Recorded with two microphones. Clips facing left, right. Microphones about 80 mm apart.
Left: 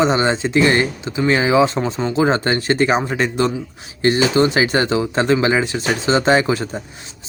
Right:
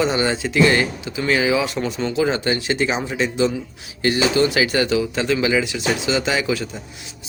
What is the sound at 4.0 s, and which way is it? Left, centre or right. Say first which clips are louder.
Speech: left 3 dB; left.